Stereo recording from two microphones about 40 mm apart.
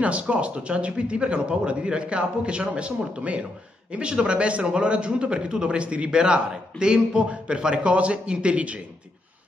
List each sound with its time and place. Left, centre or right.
0.0 s a man's voice: right